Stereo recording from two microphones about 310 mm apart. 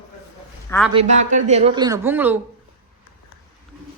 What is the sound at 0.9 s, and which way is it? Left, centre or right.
A woman's voice, right.